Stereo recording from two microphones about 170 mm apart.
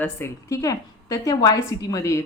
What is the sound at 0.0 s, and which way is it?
A woman's voice, 15° left (ahead or behind).